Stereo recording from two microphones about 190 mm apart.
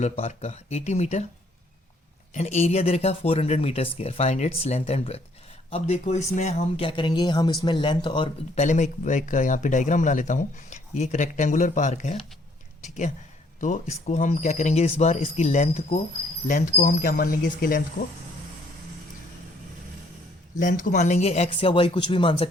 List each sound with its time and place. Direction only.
0.0 s speech: 35° left (ahead or behind)
2.3 s speech: 35° left (ahead or behind)
8.6 s speech: 40° left (ahead or behind)
13.6 s speech: 40° left (ahead or behind)
20.6 s speech: 45° left (ahead or behind); by 22.4 s 25° left (ahead or behind)